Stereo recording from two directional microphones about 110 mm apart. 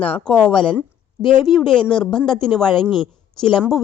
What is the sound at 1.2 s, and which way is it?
Speech, 45° left (ahead or behind).